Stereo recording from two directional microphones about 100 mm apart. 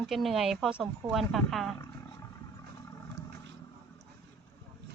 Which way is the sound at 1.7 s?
30° left (ahead or behind).